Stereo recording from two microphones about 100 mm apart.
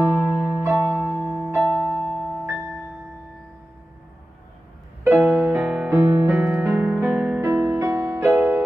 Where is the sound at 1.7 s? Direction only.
15° left (ahead or behind).